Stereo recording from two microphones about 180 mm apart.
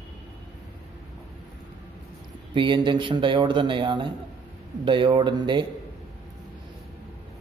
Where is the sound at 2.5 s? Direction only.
25° right (ahead or behind).